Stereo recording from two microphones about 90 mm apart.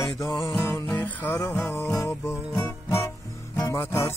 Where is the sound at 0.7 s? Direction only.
30° left (ahead or behind).